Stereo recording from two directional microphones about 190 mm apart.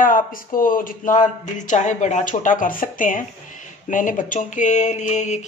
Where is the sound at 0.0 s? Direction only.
45° left (ahead or behind).